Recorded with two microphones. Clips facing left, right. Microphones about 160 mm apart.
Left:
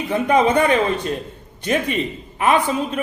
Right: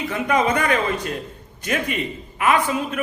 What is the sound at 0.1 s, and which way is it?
A man's voice, 30° left (ahead or behind).